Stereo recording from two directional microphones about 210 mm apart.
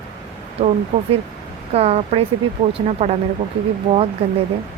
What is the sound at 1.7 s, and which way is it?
Speech, 30° right (ahead or behind).